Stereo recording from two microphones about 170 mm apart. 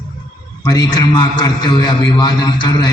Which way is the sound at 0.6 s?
25° left (ahead or behind).